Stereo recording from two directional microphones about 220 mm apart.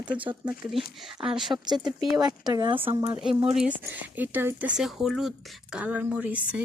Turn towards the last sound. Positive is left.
turn(degrees=-5)  # may be behind; listen again after turning